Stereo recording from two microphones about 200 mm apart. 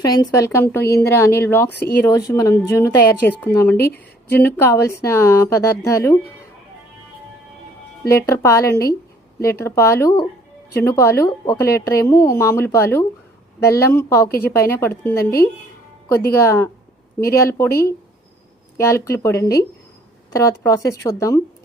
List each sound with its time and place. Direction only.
0.0 s a woman's voice: 20° left (ahead or behind)
1.7 s speech: 55° left (ahead or behind)
2.0 s a woman's voice: 15° left (ahead or behind)
8.3 s a woman's voice: 15° left (ahead or behind)
15.1 s a woman's voice: 50° left (ahead or behind)
16.3 s a woman's voice: 15° left (ahead or behind)
17.7 s a woman's voice: 50° left (ahead or behind)
18.8 s a woman's voice: 15° left (ahead or behind)